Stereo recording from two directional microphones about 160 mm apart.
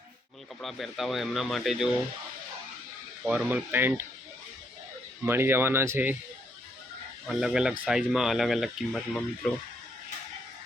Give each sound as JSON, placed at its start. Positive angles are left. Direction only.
{"t": 0.6, "sound": "speech", "side_deg": 0}
{"t": 3.2, "sound": "speech", "side_deg": -10}
{"t": 5.2, "sound": "speech", "side_deg": -15}
{"t": 7.3, "sound": "speech", "side_deg": -5}